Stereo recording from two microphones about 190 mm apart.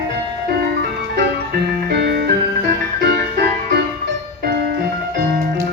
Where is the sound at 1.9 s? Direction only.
60° right (ahead or behind).